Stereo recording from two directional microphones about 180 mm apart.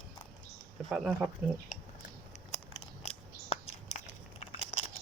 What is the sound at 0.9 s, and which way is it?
Speech, 5° right (ahead or behind).